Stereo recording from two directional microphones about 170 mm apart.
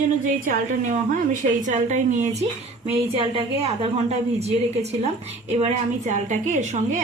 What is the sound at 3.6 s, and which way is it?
A woman's voice, 40° right (ahead or behind).